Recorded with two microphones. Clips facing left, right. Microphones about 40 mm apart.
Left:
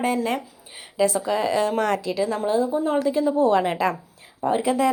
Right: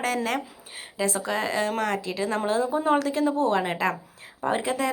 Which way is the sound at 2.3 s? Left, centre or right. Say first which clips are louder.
Even; right.